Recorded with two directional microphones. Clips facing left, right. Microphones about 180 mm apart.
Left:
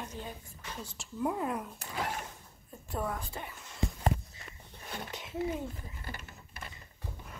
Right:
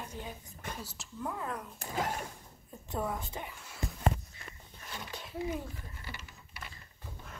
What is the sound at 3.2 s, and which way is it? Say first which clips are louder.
Speech: even; 15° right (ahead or behind).